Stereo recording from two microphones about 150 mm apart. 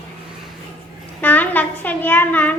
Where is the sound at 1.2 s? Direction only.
10° left (ahead or behind).